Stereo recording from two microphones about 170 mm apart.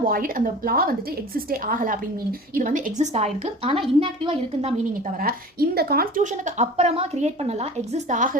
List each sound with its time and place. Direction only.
0.0 s a woman's voice: 55° right (ahead or behind); by 4.7 s 30° right (ahead or behind)
5.2 s a woman's voice: 65° right (ahead or behind)
6.3 s a woman's voice: 45° right (ahead or behind)